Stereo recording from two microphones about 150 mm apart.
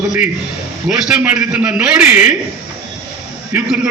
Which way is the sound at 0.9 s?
5° right (ahead or behind).